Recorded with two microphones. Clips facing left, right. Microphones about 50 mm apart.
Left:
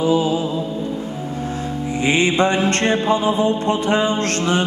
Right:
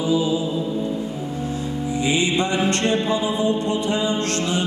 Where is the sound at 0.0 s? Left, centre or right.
Left.